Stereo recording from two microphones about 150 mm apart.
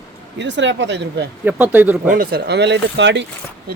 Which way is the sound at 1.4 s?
10° right (ahead or behind).